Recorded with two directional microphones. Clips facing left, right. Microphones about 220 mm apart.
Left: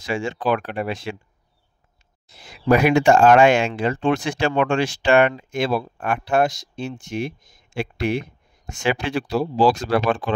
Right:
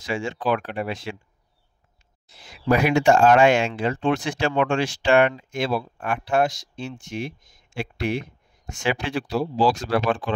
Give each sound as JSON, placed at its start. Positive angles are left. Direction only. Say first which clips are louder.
{"t": 0.0, "sound": "speech", "louder": "left 2 dB", "side_deg": 55}
{"t": 2.2, "sound": "speech", "louder": "left 3 dB", "side_deg": 60}